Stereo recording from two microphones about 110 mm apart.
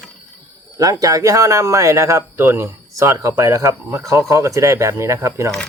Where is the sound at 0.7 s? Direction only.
30° right (ahead or behind).